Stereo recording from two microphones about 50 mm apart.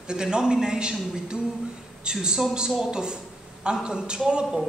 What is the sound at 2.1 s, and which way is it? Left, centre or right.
Speech, centre.